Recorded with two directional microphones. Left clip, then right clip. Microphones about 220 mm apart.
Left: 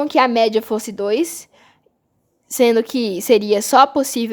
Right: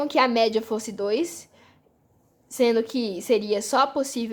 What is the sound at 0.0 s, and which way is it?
Speech, 30° left (ahead or behind).